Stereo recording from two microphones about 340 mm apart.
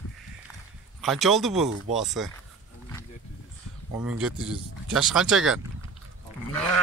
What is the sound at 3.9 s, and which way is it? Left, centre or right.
Speech, centre.